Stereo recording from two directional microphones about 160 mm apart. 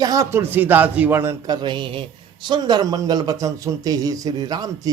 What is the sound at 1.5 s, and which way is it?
A man's voice, 30° right (ahead or behind).